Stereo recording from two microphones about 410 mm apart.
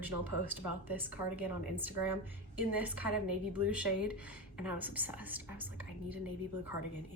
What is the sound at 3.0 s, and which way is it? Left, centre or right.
Speech, right.